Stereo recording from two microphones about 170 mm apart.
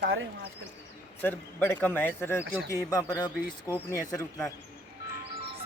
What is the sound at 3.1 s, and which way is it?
Speech, 25° left (ahead or behind).